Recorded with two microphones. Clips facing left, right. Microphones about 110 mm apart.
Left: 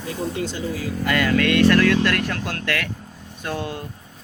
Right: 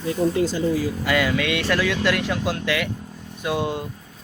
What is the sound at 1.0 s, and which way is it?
Speech, 5° right (ahead or behind).